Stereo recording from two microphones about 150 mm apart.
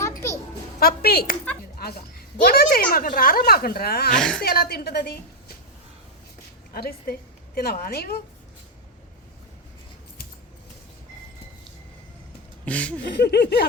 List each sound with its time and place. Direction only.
0.0 s a sound: 20° left (ahead or behind)
0.8 s a woman's voice: 90° left
2.9 s a woman's voice: 70° left (ahead or behind); by 4.1 s 90° left
4.1 s a woman's voice: 5° left (ahead or behind)
4.4 s a woman's voice: 90° left
6.7 s a woman's voice: 90° left
12.6 s a sound: 10° left (ahead or behind)
13.1 s a woman's voice: 90° left